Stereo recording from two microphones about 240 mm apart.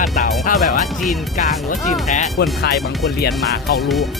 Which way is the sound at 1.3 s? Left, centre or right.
Left.